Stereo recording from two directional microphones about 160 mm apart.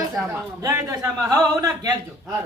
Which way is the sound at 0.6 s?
20° right (ahead or behind).